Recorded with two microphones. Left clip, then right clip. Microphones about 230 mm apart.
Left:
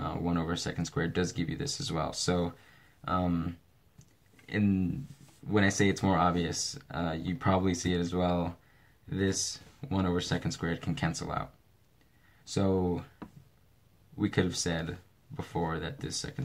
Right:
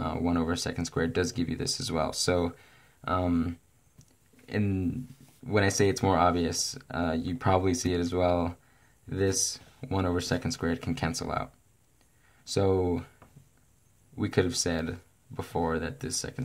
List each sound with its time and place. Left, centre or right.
0.0 s speech: right
12.5 s speech: right
14.1 s speech: right